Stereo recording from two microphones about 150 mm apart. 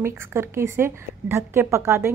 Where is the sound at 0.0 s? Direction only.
15° right (ahead or behind).